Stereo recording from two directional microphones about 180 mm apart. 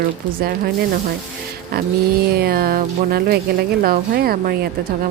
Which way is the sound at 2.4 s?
55° right (ahead or behind).